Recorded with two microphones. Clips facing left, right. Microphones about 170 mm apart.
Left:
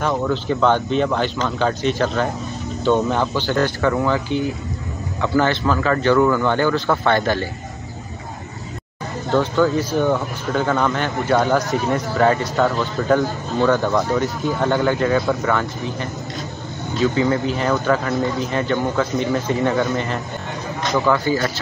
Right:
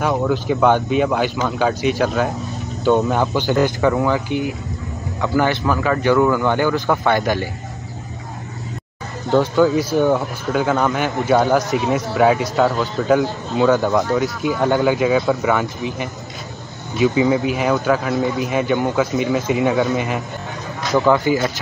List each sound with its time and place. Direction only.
0.1 s speech: 10° right (ahead or behind)
2.8 s speech: 15° right (ahead or behind)
9.3 s speech: 15° right (ahead or behind); by 14.0 s centre (ahead or behind)
14.8 s speech: 10° right (ahead or behind)
21.0 s speech: 15° right (ahead or behind)